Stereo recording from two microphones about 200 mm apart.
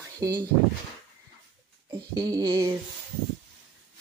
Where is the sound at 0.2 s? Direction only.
15° right (ahead or behind).